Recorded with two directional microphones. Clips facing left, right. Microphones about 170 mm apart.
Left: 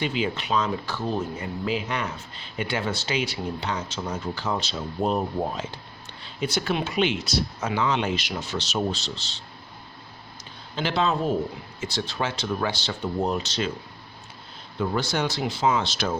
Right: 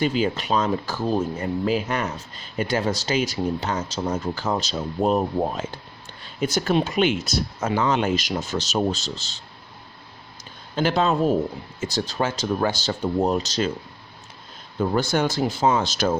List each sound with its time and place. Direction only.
0.0 s speech: 40° right (ahead or behind)
10.8 s speech: 45° right (ahead or behind)
14.8 s speech: 45° right (ahead or behind)